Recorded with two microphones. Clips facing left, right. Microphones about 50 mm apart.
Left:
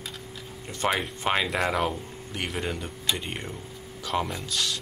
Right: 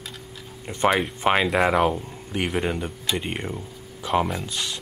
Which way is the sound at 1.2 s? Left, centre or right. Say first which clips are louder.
Right 6 dB; centre.